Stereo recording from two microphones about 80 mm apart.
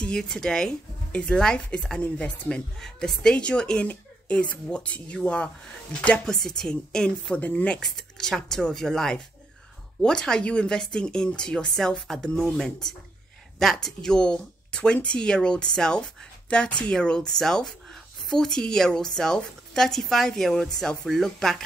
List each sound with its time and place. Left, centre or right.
0.0 s a woman's voice: centre